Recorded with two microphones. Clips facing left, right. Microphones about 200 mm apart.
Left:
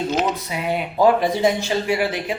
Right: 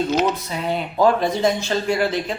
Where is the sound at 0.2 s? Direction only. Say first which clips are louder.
Right 1 dB; 10° left (ahead or behind).